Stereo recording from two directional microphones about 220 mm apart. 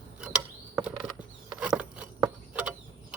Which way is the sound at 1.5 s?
5° right (ahead or behind).